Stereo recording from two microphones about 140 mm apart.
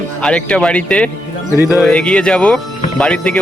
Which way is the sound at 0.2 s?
10° left (ahead or behind).